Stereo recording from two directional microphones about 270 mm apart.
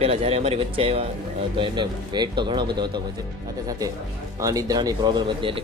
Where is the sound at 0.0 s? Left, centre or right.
Right.